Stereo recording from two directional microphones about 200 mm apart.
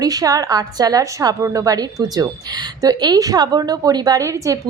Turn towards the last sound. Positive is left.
turn(degrees=-15)  # may be behind; listen again after turning